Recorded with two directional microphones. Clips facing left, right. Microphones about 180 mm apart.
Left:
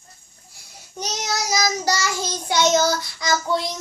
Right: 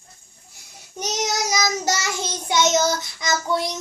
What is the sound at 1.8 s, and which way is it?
Child singing, 20° right (ahead or behind).